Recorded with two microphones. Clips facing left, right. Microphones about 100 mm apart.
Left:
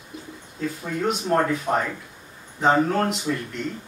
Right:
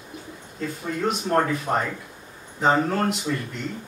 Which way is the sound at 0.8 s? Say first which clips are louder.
Even; centre (ahead or behind).